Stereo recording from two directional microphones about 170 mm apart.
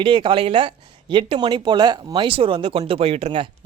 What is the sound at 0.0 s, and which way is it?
Speech, 30° right (ahead or behind).